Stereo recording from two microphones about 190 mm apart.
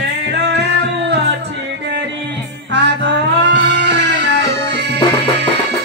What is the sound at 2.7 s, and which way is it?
Music, 65° right (ahead or behind).